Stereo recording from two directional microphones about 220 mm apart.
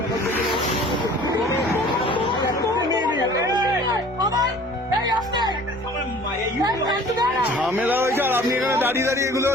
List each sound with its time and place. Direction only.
2.0 s chatter: 25° left (ahead or behind)
2.9 s chatter: 20° right (ahead or behind)
4.2 s music: 20° right (ahead or behind)
6.7 s a woman's voice: 20° right (ahead or behind)
7.5 s speech: 5° right (ahead or behind)